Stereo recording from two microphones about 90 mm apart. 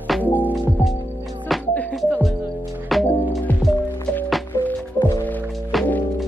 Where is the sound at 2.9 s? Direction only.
Centre (ahead or behind).